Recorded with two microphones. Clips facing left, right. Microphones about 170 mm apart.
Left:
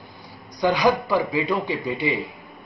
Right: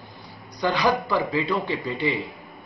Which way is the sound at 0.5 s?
15° left (ahead or behind).